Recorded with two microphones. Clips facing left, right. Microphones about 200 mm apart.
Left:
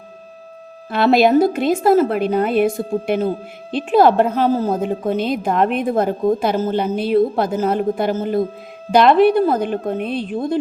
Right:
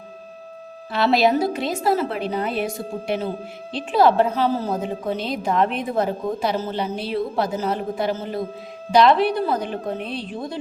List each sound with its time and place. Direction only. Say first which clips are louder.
0.9 s a woman's voice: left 5 dB; 50° left (ahead or behind)